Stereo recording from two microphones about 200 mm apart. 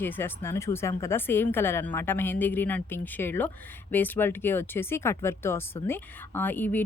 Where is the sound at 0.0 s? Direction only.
10° left (ahead or behind).